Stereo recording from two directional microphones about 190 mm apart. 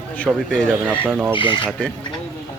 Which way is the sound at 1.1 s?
10° right (ahead or behind).